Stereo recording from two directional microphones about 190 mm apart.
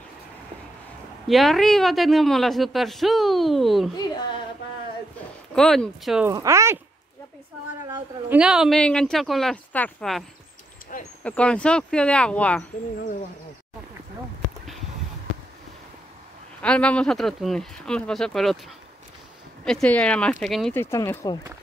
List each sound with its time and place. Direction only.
1.2 s speech: centre (ahead or behind)
5.5 s speech: 5° left (ahead or behind)
6.2 s speech: 15° right (ahead or behind)
8.3 s speech: 5° right (ahead or behind)
10.9 s speech: 45° left (ahead or behind)
11.2 s speech: 5° left (ahead or behind)
16.6 s speech: 5° left (ahead or behind)
19.6 s speech: 5° left (ahead or behind)
20.8 s speech: 15° left (ahead or behind)